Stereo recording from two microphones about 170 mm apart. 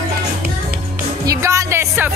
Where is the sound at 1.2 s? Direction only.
20° right (ahead or behind).